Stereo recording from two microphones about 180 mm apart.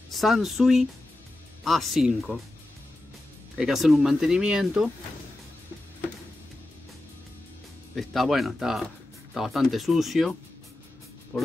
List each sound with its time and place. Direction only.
0.1 s speech: centre (ahead or behind)
3.5 s speech: centre (ahead or behind)
7.9 s speech: centre (ahead or behind)
11.3 s speech: 5° left (ahead or behind)